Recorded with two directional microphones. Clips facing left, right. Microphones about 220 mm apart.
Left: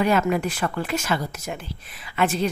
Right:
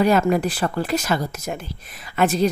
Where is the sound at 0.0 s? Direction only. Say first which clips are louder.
Right 3 dB; 40° right (ahead or behind).